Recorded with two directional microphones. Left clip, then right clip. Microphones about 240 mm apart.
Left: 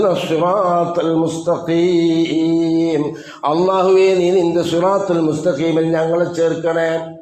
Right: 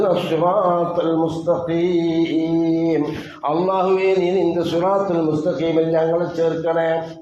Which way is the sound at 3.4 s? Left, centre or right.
Left.